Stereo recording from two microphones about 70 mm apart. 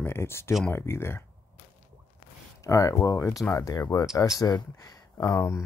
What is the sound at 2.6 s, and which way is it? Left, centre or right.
Speech, left.